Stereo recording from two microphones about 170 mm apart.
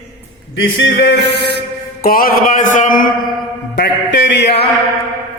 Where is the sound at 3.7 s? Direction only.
85° left.